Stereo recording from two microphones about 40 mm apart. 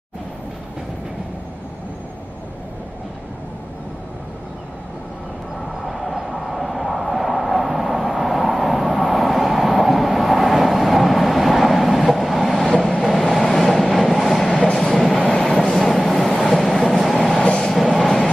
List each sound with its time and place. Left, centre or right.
5.9 s train: centre
15.3 s vehicle: centre
17.4 s train: centre